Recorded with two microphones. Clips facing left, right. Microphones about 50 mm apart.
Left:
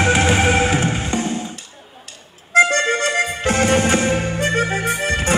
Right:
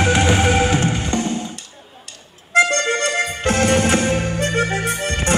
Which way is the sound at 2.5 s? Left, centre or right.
Centre.